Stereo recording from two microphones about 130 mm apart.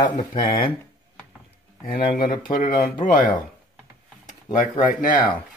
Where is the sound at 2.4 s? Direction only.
90° left.